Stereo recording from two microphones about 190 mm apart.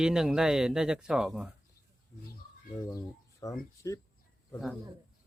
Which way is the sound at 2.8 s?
15° left (ahead or behind).